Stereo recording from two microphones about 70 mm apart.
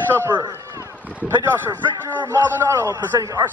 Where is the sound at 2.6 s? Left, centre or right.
Right.